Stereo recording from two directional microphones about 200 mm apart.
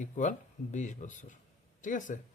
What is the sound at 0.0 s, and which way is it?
Speech, 40° left (ahead or behind).